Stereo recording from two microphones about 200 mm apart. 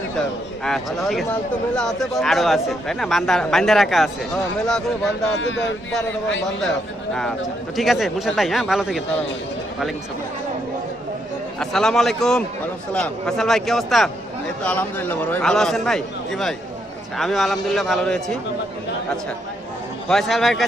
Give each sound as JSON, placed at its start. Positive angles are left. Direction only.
{"t": 0.6, "sound": "speech", "side_deg": 0}
{"t": 5.4, "sound": "speech", "side_deg": 65}
{"t": 6.6, "sound": "speech", "side_deg": 5}
{"t": 11.6, "sound": "speech", "side_deg": 5}
{"t": 20.1, "sound": "speech", "side_deg": 0}